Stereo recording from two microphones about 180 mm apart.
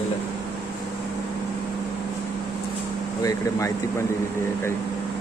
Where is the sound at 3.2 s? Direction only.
15° left (ahead or behind).